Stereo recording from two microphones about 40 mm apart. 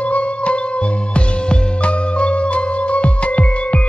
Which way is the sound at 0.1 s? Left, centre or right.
Left.